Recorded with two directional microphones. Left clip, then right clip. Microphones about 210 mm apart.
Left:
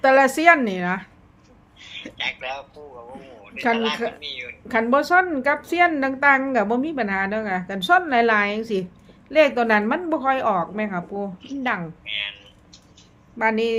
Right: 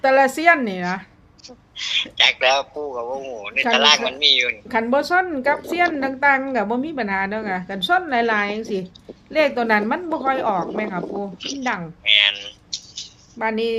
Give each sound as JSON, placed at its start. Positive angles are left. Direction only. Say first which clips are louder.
{"t": 0.0, "sound": "a woman's voice", "louder": "even", "side_deg": 5}
{"t": 1.7, "sound": "a woman's voice", "louder": "right 15 dB", "side_deg": -55}
{"t": 4.7, "sound": "a woman's voice", "louder": "left 3 dB", "side_deg": 5}
{"t": 12.0, "sound": "a sound", "louder": "right 17 dB", "side_deg": -55}
{"t": 13.4, "sound": "a woman's voice", "louder": "left 1 dB", "side_deg": 5}